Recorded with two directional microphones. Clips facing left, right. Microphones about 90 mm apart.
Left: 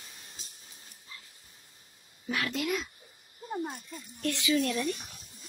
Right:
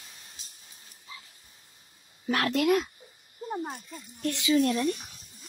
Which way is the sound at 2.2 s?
65° right (ahead or behind).